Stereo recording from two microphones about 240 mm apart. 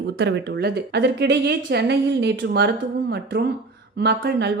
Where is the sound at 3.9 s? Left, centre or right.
Right.